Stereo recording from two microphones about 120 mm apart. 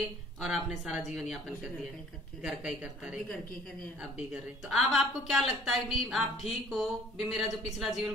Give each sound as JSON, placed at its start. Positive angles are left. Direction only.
{"t": 0.4, "sound": "a woman's voice", "side_deg": -5}
{"t": 2.4, "sound": "a woman's voice", "side_deg": -10}